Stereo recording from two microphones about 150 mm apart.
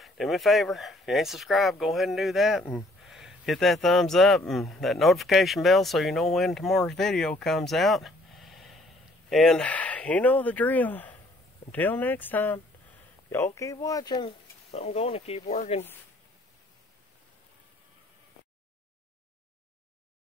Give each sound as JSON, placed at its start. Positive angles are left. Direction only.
{"t": 0.0, "sound": "speech", "side_deg": 0}
{"t": 14.7, "sound": "speech", "side_deg": 45}